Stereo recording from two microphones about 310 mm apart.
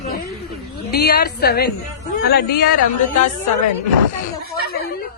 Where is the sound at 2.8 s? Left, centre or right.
Left.